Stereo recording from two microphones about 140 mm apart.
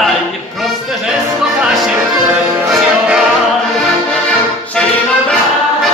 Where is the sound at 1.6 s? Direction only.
Centre (ahead or behind).